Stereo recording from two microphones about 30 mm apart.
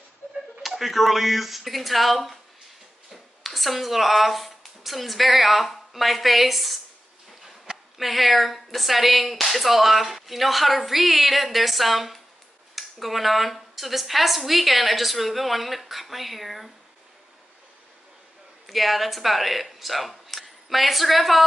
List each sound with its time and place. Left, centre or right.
0.6 s speech: centre
7.7 s a sound: right
8.0 s speech: centre
18.7 s speech: centre